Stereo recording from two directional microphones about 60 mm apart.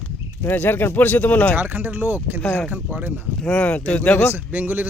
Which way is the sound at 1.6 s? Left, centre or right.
Right.